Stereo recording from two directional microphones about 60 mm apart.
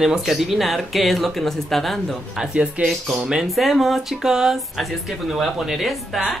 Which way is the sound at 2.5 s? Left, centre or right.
Centre.